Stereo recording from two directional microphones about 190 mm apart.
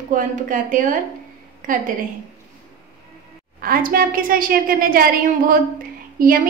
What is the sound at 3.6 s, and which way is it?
A woman's voice, 50° right (ahead or behind).